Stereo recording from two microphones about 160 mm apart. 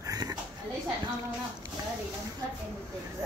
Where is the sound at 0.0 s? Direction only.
20° right (ahead or behind).